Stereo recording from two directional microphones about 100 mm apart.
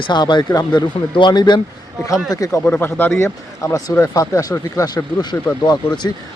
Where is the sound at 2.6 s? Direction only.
20° left (ahead or behind); by 6.1 s 45° left (ahead or behind).